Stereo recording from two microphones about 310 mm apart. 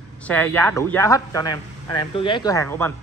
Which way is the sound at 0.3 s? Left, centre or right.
Centre.